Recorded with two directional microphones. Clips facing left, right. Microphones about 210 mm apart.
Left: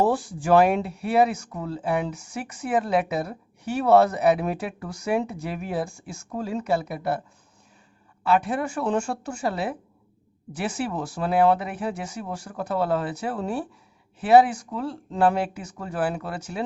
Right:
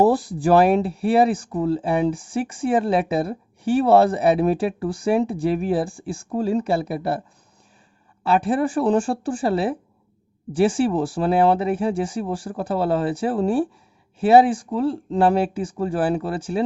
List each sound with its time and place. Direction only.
0.0 s speech: 35° right (ahead or behind)
8.2 s speech: 30° right (ahead or behind)